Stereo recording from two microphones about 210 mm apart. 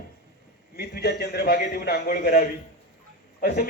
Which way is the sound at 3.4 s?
45° left (ahead or behind).